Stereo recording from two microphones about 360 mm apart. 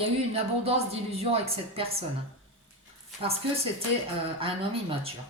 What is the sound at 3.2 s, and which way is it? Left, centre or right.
Speech, centre.